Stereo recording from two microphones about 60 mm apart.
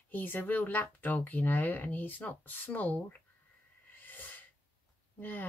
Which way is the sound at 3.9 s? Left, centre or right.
Left.